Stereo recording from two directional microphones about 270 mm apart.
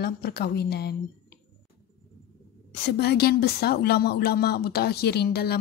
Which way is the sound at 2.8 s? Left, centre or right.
Left.